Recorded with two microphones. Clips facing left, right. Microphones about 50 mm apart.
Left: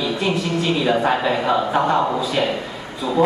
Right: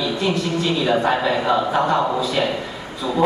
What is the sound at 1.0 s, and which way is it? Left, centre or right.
Speech, centre.